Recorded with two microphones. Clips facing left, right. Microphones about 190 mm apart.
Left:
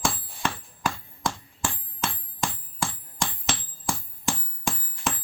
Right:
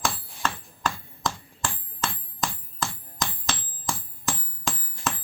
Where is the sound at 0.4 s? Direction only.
10° left (ahead or behind).